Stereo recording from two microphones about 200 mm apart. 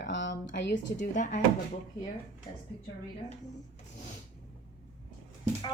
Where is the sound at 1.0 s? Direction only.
40° left (ahead or behind).